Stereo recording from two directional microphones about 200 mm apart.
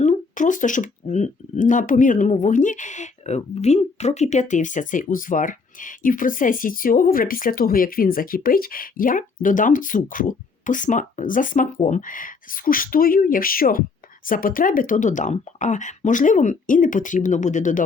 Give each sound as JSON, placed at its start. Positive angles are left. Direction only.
{"t": 0.0, "sound": "speech", "side_deg": 40}